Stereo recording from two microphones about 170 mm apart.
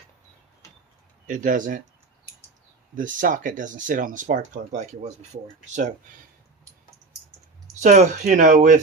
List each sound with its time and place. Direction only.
1.3 s speech: 50° right (ahead or behind)
2.9 s speech: 50° right (ahead or behind)
7.8 s speech: 45° right (ahead or behind)